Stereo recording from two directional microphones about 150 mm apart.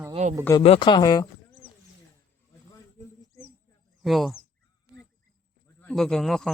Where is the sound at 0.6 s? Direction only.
35° left (ahead or behind).